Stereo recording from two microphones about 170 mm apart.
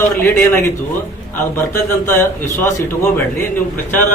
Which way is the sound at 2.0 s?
15° left (ahead or behind).